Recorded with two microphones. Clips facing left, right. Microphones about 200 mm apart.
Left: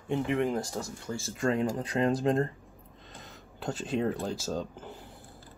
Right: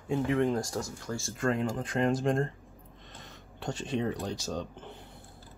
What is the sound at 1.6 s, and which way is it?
Speech, 35° left (ahead or behind).